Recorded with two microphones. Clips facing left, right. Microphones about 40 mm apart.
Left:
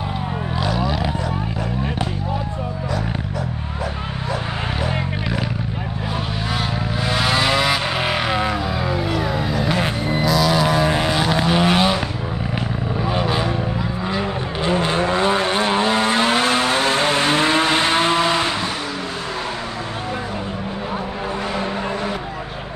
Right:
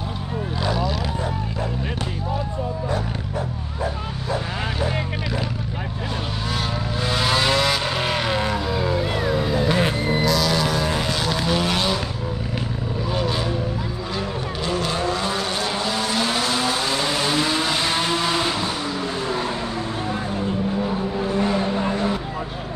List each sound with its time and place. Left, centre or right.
7.1 s vehicle: centre
13.1 s vehicle: centre